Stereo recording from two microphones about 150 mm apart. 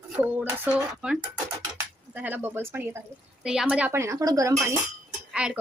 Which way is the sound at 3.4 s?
5° right (ahead or behind).